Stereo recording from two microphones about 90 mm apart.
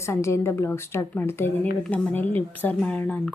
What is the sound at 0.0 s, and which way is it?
Speech, 30° left (ahead or behind).